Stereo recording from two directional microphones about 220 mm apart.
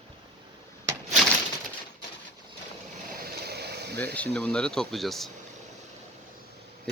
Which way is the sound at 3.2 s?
45° right (ahead or behind).